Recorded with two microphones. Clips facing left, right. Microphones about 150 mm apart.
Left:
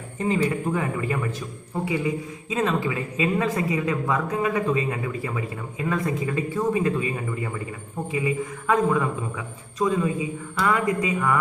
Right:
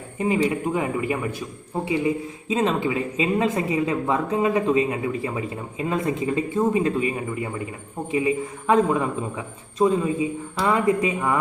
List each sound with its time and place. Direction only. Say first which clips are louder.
0.2 s a man's voice: right 2 dB; 15° right (ahead or behind)